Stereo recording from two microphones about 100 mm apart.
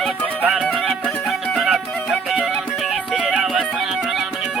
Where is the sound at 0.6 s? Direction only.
Centre (ahead or behind).